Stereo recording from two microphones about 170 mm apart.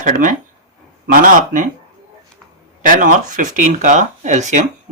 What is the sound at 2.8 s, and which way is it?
Speech, 50° right (ahead or behind).